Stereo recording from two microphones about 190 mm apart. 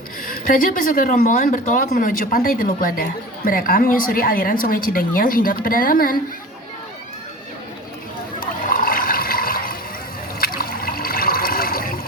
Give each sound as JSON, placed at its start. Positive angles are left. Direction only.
{"t": 0.3, "sound": "speech", "side_deg": 45}
{"t": 8.4, "sound": "water", "side_deg": 50}